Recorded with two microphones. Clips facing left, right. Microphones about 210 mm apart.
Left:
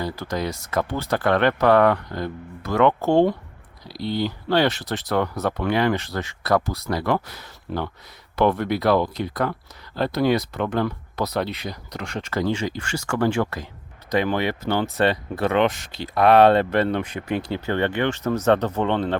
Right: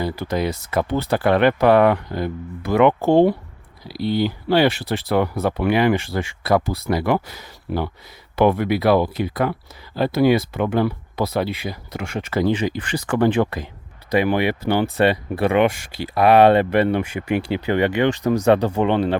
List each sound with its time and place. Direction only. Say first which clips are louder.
0.0 s speech: right 4 dB; 10° right (ahead or behind)
3.9 s speech: right 5 dB; 25° left (ahead or behind)
4.2 s speech: right 3 dB; 10° right (ahead or behind)